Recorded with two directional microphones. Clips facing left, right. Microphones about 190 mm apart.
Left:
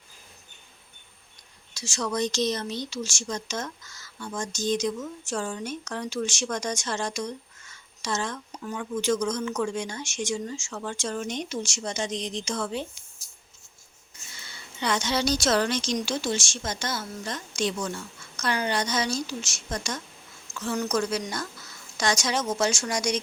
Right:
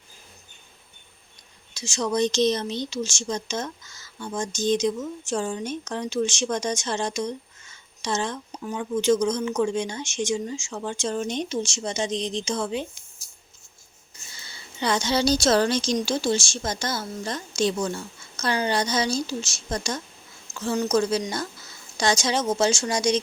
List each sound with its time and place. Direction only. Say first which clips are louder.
1.7 s speech: right 4 dB; 20° right (ahead or behind)
14.3 s a woman's voice: even; 35° right (ahead or behind)